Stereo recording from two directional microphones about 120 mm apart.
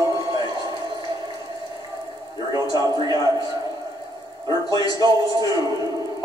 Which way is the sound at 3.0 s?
35° left (ahead or behind).